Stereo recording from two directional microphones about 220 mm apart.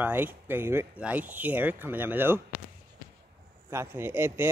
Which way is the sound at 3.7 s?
10° right (ahead or behind).